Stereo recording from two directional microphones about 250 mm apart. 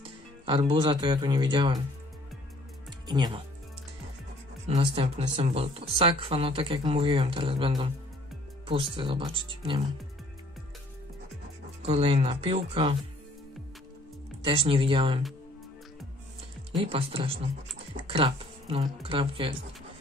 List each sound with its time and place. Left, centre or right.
0.0 s speech: centre
3.1 s speech: centre
4.6 s speech: right
11.8 s speech: right
14.4 s speech: centre
16.8 s speech: right